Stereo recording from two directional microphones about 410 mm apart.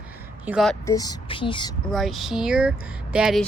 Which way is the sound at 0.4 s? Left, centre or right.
Centre.